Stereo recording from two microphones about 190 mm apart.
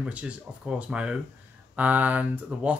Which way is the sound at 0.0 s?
5° right (ahead or behind).